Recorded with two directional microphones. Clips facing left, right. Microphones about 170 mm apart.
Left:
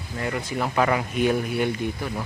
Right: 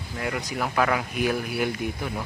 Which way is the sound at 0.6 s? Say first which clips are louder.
Left 2 dB; centre (ahead or behind).